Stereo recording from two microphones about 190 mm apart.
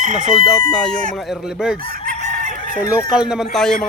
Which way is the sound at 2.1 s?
35° right (ahead or behind).